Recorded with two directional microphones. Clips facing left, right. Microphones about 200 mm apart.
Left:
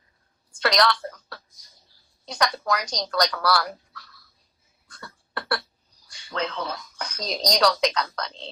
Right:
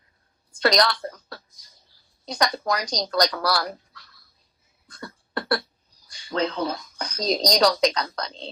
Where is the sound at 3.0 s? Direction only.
25° right (ahead or behind).